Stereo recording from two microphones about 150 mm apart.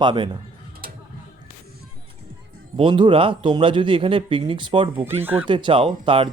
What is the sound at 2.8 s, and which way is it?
Speech, 35° right (ahead or behind).